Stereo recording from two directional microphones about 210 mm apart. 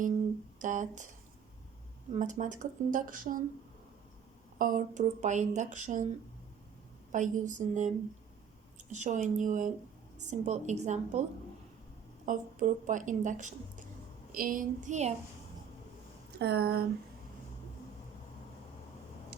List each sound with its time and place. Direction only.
0.6 s speech: 35° right (ahead or behind)
2.1 s speech: 35° right (ahead or behind)
4.5 s speech: 40° right (ahead or behind)
7.1 s speech: 35° right (ahead or behind)
12.2 s speech: 40° right (ahead or behind)
16.4 s speech: 50° right (ahead or behind)